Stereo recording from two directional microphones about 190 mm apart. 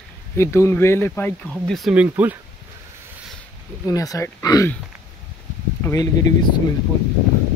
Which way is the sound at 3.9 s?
20° left (ahead or behind).